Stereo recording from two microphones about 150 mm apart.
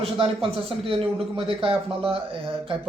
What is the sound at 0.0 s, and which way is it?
Speech, 35° right (ahead or behind).